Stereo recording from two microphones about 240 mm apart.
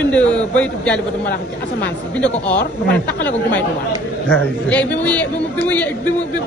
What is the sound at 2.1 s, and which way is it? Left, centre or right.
Speech, centre.